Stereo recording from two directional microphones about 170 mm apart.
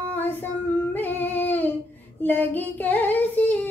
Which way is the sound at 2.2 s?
10° left (ahead or behind).